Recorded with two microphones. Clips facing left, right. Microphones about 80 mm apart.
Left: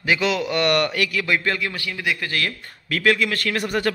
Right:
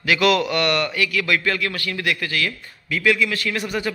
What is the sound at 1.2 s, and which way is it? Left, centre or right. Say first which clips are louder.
A man's voice: right 1 dB; left.